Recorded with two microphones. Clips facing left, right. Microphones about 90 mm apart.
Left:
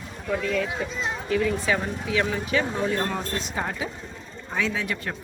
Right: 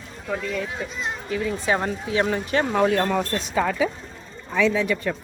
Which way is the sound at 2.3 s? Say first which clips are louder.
Right 2 dB; 50° right (ahead or behind).